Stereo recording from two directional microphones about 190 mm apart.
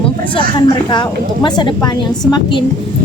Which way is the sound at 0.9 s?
25° left (ahead or behind).